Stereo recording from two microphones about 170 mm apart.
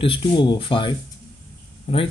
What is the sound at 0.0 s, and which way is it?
Speech, 30° left (ahead or behind).